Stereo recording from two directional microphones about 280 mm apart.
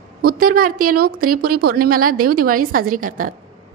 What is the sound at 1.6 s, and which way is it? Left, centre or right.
A woman's voice, right.